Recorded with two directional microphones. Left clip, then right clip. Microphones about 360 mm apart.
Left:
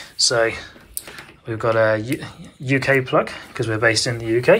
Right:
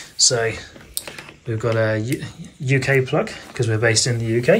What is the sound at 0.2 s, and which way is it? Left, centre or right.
Speech, centre.